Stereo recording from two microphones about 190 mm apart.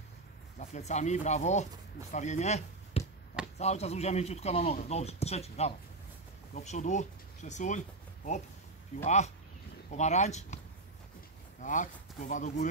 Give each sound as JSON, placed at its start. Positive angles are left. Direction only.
{"t": 0.6, "sound": "speech", "side_deg": 35}
{"t": 8.9, "sound": "speech", "side_deg": 35}
{"t": 11.6, "sound": "speech", "side_deg": 40}